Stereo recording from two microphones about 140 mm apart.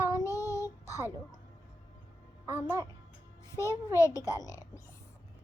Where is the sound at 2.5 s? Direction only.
15° right (ahead or behind).